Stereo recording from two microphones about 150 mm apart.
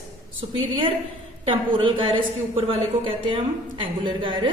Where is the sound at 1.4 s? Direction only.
35° right (ahead or behind).